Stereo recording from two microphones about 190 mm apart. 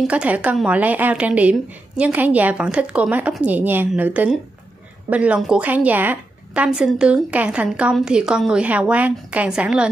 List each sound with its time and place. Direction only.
0.0 s a woman's voice: 5° right (ahead or behind)